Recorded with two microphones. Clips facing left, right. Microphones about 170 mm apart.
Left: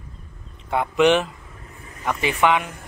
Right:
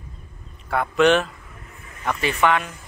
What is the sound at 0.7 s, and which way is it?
Speech, 15° left (ahead or behind).